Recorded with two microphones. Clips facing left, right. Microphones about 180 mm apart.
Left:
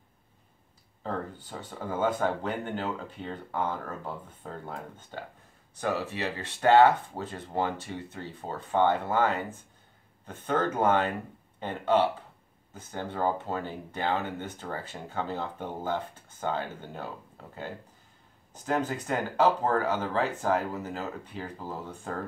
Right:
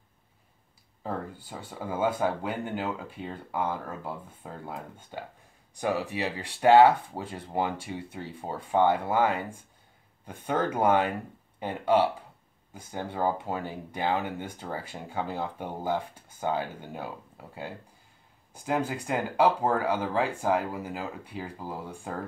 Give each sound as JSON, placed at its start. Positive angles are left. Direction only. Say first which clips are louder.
{"t": 1.0, "sound": "speech", "louder": "even", "side_deg": -10}